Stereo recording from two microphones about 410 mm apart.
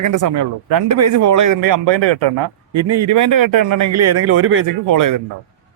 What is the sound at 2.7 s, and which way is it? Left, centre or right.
A man's voice, right.